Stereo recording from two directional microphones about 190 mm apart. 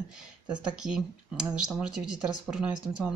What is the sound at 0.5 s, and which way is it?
Speech, 5° right (ahead or behind).